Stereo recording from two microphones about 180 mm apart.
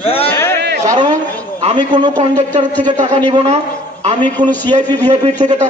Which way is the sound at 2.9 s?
40° right (ahead or behind).